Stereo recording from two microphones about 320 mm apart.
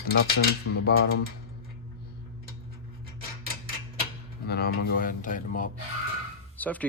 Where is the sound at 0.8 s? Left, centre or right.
Left.